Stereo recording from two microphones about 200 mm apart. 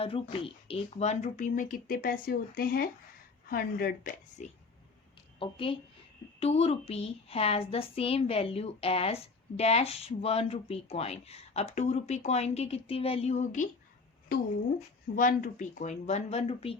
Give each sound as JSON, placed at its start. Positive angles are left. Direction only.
{"t": 0.0, "sound": "a woman's voice", "side_deg": 30}
{"t": 5.4, "sound": "a woman's voice", "side_deg": 25}
{"t": 15.1, "sound": "a woman's voice", "side_deg": 40}